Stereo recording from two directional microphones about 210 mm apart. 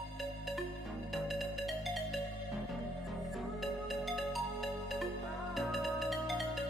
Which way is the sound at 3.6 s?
Centre (ahead or behind).